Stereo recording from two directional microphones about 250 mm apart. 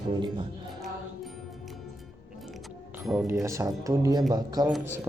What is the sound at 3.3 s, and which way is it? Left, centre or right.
Speech, centre.